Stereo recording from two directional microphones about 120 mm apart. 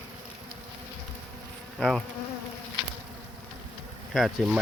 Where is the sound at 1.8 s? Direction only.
5° left (ahead or behind).